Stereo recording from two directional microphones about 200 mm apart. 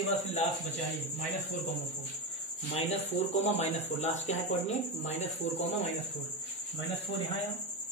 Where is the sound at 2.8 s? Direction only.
30° left (ahead or behind).